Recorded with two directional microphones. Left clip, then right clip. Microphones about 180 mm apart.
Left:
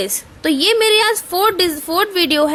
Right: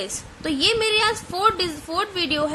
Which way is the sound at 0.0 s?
40° left (ahead or behind).